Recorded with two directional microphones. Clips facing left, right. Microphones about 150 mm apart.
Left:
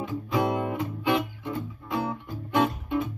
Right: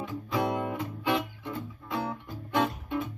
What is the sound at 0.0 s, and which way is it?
Music, 20° left (ahead or behind).